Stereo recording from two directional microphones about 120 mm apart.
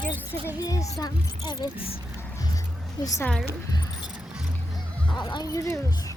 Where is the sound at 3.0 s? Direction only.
35° left (ahead or behind).